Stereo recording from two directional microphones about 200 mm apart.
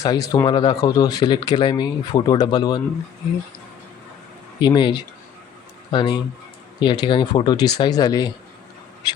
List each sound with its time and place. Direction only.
0.0 s speech: 20° left (ahead or behind)
4.6 s speech: 20° left (ahead or behind)